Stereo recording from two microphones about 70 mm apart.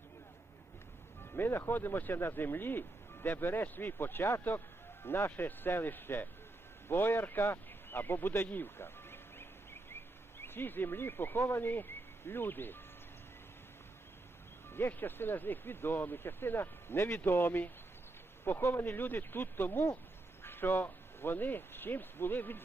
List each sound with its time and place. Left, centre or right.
1.2 s speech: left
8.4 s a sound: left
10.4 s speech: left
14.7 s speech: left